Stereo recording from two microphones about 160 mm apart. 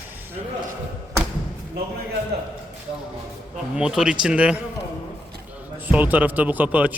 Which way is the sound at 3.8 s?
5° right (ahead or behind).